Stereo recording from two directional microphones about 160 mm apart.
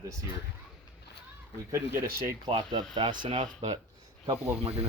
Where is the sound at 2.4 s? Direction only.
30° right (ahead or behind).